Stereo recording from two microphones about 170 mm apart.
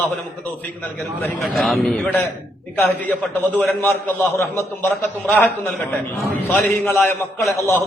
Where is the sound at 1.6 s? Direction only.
Centre (ahead or behind).